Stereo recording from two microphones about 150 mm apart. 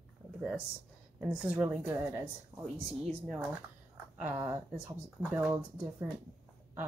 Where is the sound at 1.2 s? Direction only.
5° right (ahead or behind).